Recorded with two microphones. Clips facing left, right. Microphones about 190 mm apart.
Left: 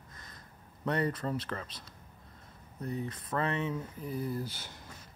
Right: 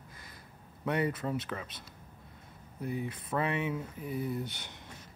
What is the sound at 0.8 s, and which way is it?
Speech, 5° right (ahead or behind).